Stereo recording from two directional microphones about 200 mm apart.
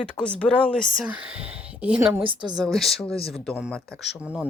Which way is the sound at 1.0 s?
5° right (ahead or behind).